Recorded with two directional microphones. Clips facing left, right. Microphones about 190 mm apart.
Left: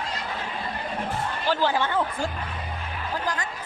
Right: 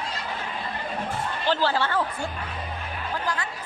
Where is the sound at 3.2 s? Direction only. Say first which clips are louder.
Even; 40° left (ahead or behind).